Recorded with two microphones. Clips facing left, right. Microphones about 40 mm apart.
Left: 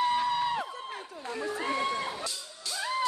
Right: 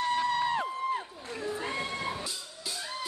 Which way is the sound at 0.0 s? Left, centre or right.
Centre.